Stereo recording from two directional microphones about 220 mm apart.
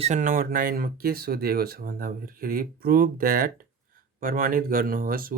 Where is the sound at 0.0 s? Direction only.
35° right (ahead or behind).